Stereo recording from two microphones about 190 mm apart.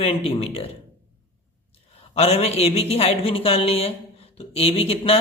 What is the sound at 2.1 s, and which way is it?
Speech, 30° left (ahead or behind).